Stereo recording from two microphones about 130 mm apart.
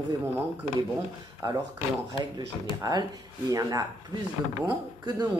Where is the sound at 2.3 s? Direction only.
30° right (ahead or behind).